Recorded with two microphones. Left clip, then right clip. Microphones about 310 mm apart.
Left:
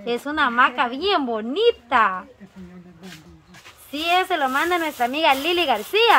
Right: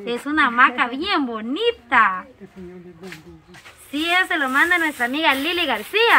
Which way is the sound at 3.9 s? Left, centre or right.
Left.